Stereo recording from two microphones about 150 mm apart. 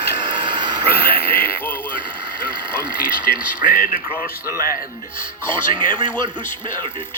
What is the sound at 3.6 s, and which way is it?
Speech, 70° left (ahead or behind).